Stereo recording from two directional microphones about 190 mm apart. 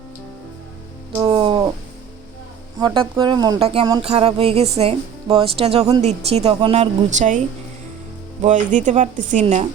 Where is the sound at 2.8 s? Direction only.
25° right (ahead or behind).